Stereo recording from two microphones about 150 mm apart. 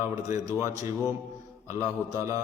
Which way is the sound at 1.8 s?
20° right (ahead or behind).